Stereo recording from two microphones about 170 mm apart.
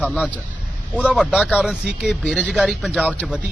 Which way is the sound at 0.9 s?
5° right (ahead or behind).